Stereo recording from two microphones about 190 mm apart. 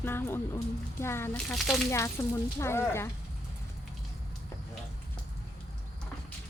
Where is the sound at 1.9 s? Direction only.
15° left (ahead or behind).